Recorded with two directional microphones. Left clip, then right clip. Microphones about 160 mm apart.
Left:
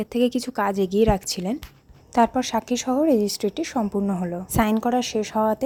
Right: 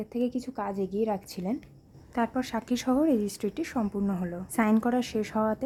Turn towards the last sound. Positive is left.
turn(degrees=15)  # may be behind; listen again after turning